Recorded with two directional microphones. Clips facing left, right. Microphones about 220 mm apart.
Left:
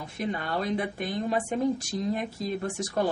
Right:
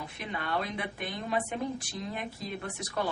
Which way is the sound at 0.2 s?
40° left (ahead or behind).